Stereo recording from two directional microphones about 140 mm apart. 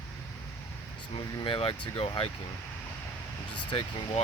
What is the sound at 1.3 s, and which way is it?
Speech, 35° left (ahead or behind).